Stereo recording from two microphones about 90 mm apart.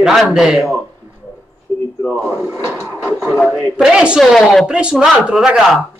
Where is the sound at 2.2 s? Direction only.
20° right (ahead or behind).